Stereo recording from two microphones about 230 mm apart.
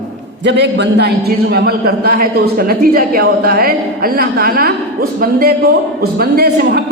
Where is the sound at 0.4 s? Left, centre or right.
Right.